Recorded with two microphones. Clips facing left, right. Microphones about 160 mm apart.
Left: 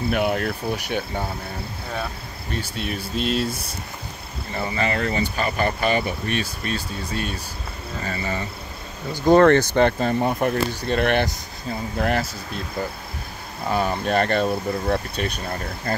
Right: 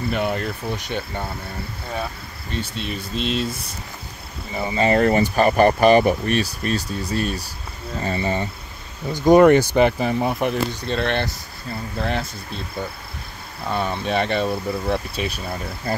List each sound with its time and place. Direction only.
0.1 s speech: 5° left (ahead or behind)
2.5 s speech: 5° left (ahead or behind)
4.6 s speech: 25° right (ahead or behind)
4.9 s speech: 45° right (ahead or behind)
8.0 s speech: 25° right (ahead or behind)
9.1 s speech: 15° right (ahead or behind)
10.9 s speech: 10° left (ahead or behind)
13.7 s speech: 5° left (ahead or behind)